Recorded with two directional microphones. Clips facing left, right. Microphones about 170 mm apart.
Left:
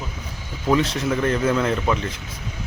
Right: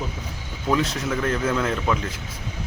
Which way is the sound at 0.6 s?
Centre (ahead or behind).